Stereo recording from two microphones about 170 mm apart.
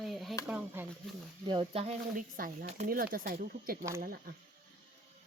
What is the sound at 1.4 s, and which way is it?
Speech, 30° right (ahead or behind).